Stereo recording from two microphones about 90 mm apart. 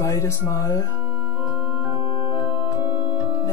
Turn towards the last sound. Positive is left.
turn(degrees=-25)  # may be behind; listen again after turning